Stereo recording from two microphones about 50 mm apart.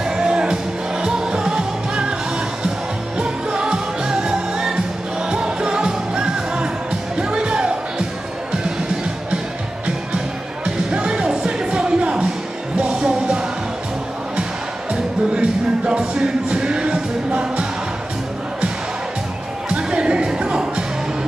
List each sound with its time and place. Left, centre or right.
0.0 s music: centre
3.2 s music: centre
9.8 s music: centre
14.9 s music: centre
19.7 s music: centre